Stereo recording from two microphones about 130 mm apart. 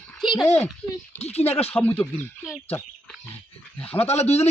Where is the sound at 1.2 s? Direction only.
55° left (ahead or behind).